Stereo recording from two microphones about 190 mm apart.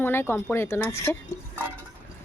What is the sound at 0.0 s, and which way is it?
Speech, 10° left (ahead or behind).